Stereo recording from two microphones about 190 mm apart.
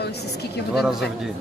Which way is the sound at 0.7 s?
Centre (ahead or behind).